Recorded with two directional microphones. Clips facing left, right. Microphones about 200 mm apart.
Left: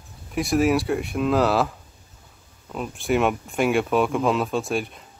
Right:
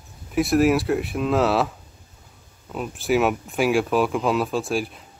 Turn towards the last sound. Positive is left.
turn(degrees=0)  # may be behind; listen again after turning